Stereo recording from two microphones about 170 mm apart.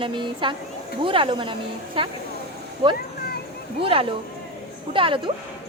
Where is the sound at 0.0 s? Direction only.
30° right (ahead or behind).